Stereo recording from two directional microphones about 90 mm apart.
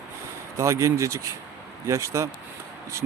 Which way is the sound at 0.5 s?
35° right (ahead or behind).